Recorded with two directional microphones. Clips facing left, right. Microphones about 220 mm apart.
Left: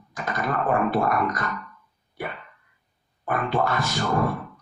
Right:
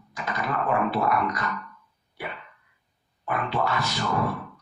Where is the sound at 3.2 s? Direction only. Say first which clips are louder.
Left 3 dB; 50° left (ahead or behind).